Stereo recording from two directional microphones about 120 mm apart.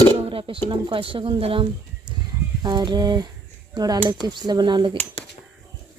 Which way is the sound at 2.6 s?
40° right (ahead or behind).